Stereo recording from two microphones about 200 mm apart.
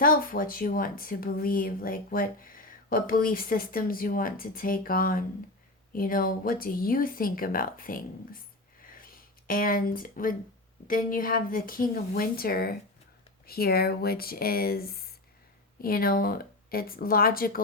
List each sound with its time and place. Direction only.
0.0 s speech: 45° left (ahead or behind)
8.8 s a sound: 45° left (ahead or behind)
9.5 s speech: 45° left (ahead or behind)